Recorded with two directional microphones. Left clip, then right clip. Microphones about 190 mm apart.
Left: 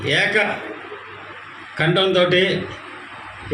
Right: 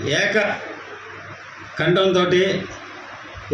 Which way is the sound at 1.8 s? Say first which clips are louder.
Left 1 dB; 50° right (ahead or behind).